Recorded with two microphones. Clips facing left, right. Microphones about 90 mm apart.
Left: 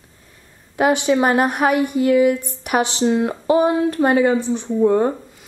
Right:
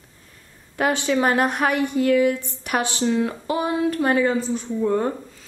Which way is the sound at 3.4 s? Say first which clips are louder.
Left 8 dB; 35° left (ahead or behind).